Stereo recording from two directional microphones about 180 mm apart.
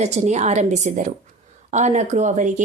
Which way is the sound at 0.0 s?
40° right (ahead or behind).